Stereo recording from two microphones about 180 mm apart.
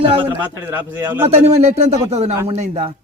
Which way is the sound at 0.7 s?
10° right (ahead or behind).